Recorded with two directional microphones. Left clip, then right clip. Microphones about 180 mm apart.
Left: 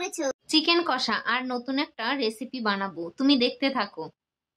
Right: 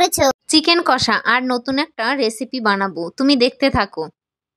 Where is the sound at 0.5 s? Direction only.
45° right (ahead or behind).